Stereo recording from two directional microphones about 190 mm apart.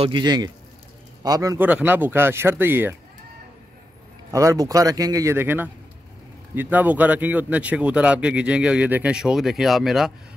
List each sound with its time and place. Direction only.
0.0 s a man's voice: 25° right (ahead or behind)
4.3 s a man's voice: 15° right (ahead or behind)